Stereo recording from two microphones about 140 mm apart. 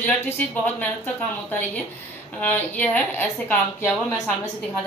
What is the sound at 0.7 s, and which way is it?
A woman's voice, 10° left (ahead or behind).